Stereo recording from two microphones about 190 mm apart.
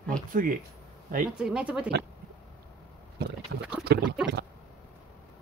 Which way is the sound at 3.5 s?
65° right (ahead or behind).